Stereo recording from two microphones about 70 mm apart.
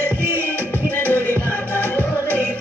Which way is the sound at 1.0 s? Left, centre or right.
Left.